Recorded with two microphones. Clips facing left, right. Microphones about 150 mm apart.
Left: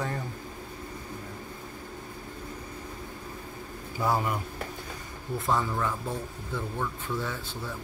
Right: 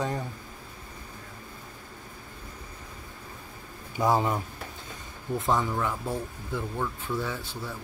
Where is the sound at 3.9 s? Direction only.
20° right (ahead or behind).